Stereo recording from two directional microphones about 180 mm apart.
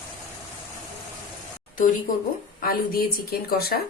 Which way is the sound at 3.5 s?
55° left (ahead or behind).